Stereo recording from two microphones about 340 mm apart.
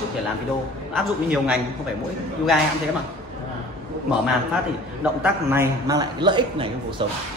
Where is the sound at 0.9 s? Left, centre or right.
Centre.